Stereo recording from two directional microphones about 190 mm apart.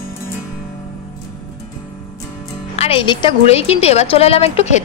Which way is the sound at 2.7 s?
30° left (ahead or behind).